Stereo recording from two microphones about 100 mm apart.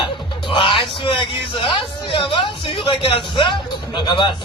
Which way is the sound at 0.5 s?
60° left (ahead or behind).